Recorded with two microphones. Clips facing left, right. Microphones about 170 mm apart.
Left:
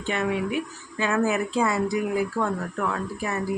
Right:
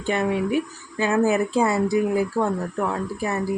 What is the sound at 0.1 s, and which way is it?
Speech, 35° right (ahead or behind).